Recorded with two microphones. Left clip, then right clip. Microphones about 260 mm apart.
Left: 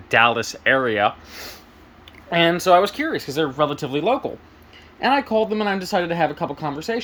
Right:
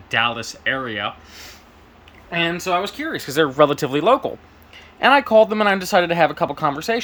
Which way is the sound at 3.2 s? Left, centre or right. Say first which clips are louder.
Right 8 dB; centre.